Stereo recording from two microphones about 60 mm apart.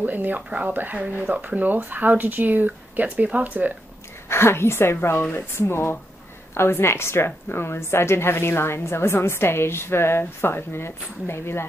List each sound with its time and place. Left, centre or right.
0.0 s speech: right
4.3 s a woman's voice: left